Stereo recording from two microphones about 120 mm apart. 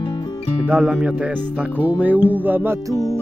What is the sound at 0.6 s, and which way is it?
Music, 15° right (ahead or behind).